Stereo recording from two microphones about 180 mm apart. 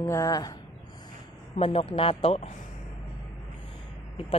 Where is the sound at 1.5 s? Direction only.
30° left (ahead or behind).